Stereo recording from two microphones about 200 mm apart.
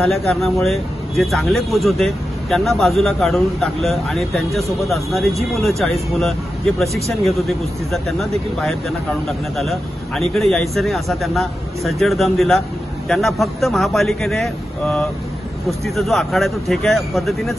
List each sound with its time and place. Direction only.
0.0 s a man's voice: centre (ahead or behind)
9.6 s a man's voice: centre (ahead or behind)